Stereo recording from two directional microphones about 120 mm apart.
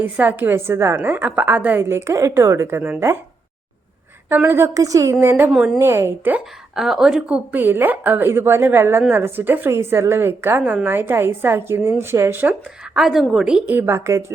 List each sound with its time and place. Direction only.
0.0 s a woman's voice: 15° right (ahead or behind)
4.3 s a woman's voice: 20° right (ahead or behind)
5.5 s a woman's voice: 5° right (ahead or behind)
5.8 s a woman's voice: 20° right (ahead or behind)
6.7 s a woman's voice: 5° right (ahead or behind)
13.0 s a woman's voice: centre (ahead or behind); by 14.3 s 20° right (ahead or behind)